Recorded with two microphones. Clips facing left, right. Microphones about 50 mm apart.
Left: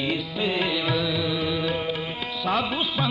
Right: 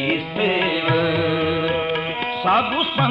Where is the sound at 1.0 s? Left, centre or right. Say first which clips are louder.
Right 6 dB; right.